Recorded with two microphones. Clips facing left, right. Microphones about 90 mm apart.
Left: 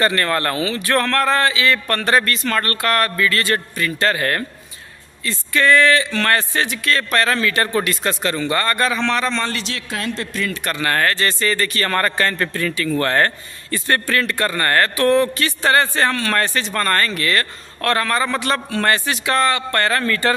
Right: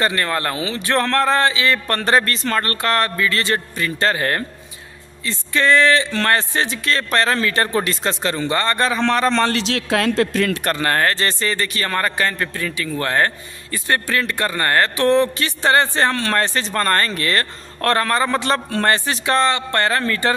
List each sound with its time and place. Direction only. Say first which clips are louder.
0.0 s speech: left 2 dB; 15° right (ahead or behind)
9.0 s a man's voice: right 3 dB; 40° right (ahead or behind)
9.3 s a man's voice: right 5 dB; 65° right (ahead or behind)
10.6 s speech: right 1 dB; 35° right (ahead or behind)